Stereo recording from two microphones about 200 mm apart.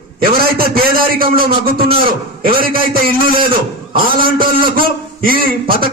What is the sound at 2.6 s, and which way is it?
Speech, 45° right (ahead or behind).